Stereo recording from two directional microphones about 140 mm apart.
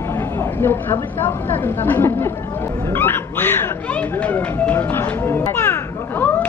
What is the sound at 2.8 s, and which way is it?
Speech, 15° left (ahead or behind).